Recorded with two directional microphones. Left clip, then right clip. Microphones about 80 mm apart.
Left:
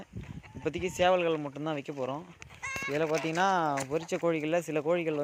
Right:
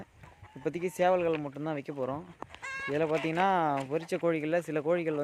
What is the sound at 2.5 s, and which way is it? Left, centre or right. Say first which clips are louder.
Sheep: left 1 dB; right.